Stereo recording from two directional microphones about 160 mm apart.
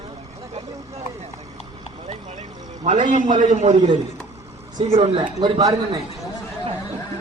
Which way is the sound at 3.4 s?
45° right (ahead or behind).